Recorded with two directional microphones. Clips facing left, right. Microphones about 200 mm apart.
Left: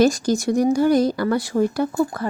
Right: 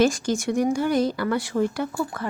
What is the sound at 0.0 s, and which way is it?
Speech, 40° left (ahead or behind).